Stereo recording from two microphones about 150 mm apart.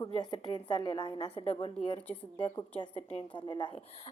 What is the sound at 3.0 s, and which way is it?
Speech, 45° left (ahead or behind).